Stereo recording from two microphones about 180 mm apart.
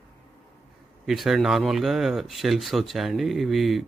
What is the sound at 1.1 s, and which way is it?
Speech, centre (ahead or behind).